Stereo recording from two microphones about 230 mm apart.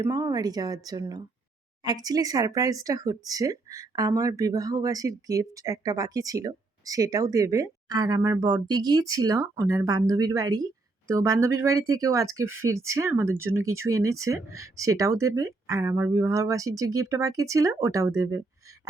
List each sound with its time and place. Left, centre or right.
0.0 s speech: centre